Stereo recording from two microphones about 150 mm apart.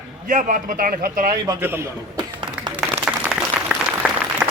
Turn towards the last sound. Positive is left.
turn(degrees=-5)  # may be behind; listen again after turning